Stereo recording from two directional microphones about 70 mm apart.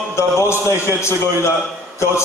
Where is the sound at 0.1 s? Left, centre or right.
Left.